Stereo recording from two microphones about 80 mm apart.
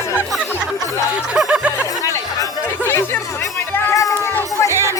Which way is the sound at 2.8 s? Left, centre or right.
Left.